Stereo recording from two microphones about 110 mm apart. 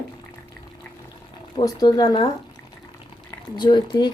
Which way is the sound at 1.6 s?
35° left (ahead or behind).